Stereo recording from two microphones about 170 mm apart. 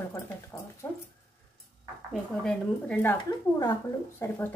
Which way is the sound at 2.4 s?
10° left (ahead or behind).